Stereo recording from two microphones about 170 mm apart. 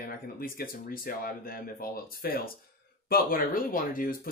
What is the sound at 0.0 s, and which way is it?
Speech, 60° left (ahead or behind).